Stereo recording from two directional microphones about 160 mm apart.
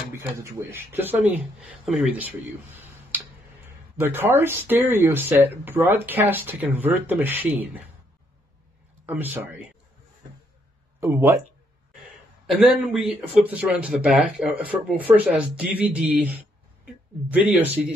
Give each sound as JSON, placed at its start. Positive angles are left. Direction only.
{"t": 0.1, "sound": "speech", "side_deg": -15}
{"t": 1.6, "sound": "speech", "side_deg": 0}
{"t": 9.0, "sound": "speech", "side_deg": -10}
{"t": 11.0, "sound": "speech", "side_deg": -15}
{"t": 12.4, "sound": "a man's voice", "side_deg": -5}